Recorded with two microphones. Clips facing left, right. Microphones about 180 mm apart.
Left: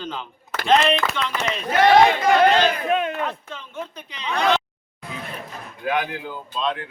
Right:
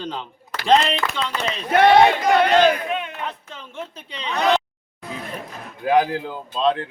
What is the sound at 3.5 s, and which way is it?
Speech, 30° right (ahead or behind).